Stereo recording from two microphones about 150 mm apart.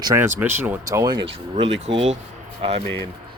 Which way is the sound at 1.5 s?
45° right (ahead or behind).